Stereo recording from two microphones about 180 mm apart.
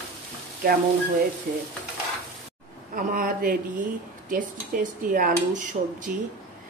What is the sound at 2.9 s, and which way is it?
Speech, 50° right (ahead or behind).